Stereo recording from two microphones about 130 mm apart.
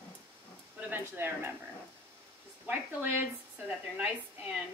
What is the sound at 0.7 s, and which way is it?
Speech, 10° right (ahead or behind).